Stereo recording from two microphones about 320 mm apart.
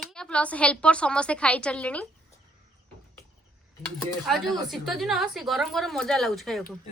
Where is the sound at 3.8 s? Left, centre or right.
Centre.